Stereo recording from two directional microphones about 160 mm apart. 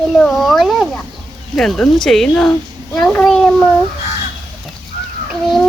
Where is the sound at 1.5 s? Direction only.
Centre (ahead or behind).